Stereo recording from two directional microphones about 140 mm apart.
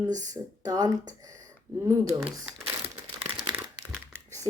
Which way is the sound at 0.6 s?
25° right (ahead or behind).